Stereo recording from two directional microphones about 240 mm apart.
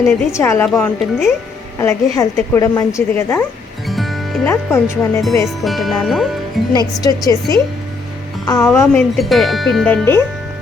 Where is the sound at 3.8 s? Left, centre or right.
Centre.